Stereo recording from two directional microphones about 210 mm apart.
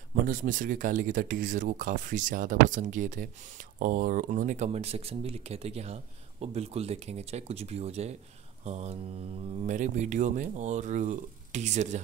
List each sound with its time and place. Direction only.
0.2 s speech: 40° right (ahead or behind)